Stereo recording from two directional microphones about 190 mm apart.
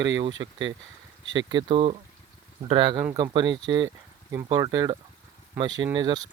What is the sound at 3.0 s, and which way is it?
Speech, 15° right (ahead or behind).